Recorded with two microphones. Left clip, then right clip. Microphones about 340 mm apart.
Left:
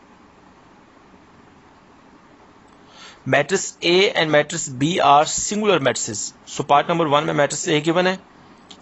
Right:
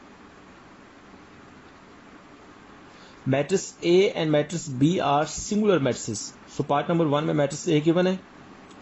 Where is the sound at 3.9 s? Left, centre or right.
Left.